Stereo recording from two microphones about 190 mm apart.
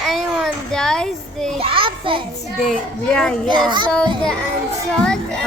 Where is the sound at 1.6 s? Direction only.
30° right (ahead or behind).